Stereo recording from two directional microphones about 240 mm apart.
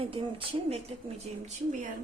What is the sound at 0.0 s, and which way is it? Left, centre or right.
Speech, right.